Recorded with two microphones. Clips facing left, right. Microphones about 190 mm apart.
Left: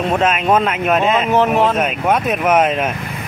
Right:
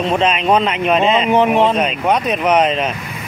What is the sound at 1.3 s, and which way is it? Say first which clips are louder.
Speech: right 1 dB; 15° right (ahead or behind).